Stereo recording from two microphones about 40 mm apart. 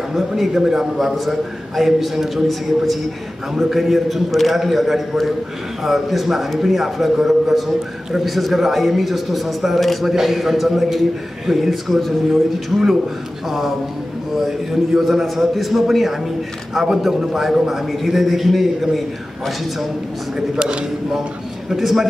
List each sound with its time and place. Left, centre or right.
0.1 s a man's voice: centre
20.5 s speech: right
21.6 s a man's voice: centre